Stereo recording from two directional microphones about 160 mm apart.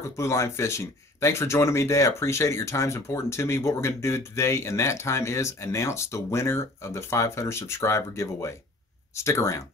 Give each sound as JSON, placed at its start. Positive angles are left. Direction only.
{"t": 0.0, "sound": "speech", "side_deg": 20}